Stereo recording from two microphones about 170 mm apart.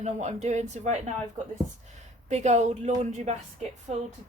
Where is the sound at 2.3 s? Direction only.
40° right (ahead or behind).